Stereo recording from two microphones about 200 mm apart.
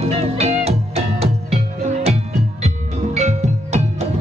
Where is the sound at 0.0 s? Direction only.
30° right (ahead or behind).